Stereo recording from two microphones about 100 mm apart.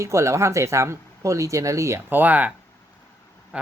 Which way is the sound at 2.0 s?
20° right (ahead or behind).